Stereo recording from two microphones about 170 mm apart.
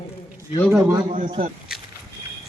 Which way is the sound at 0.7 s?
15° right (ahead or behind).